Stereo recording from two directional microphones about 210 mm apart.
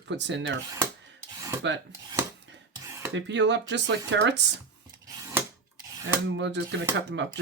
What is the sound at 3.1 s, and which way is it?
Speech, 60° right (ahead or behind).